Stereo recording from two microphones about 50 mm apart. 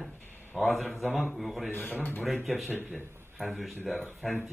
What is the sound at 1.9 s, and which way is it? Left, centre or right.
Speech, left.